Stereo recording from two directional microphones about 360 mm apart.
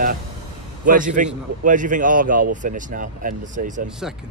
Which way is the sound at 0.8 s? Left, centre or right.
Right.